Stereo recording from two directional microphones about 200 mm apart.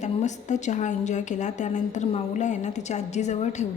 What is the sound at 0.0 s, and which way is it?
A woman's voice, 35° left (ahead or behind).